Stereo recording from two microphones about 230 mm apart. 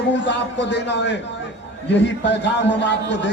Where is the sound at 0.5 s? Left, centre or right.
Left.